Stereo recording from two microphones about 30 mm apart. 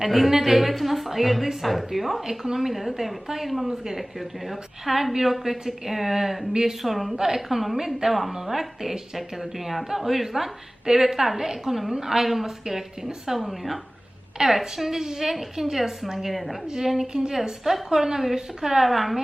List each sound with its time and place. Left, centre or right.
0.0 s a woman's voice: centre
3.7 s a woman's voice: centre
6.5 s speech: right
6.8 s a woman's voice: centre
13.4 s a woman's voice: centre
17.1 s a woman's voice: right
18.9 s speech: centre